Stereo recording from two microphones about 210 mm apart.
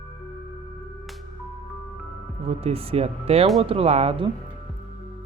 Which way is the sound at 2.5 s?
30° right (ahead or behind).